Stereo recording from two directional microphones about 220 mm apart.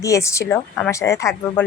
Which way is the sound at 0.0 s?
15° left (ahead or behind).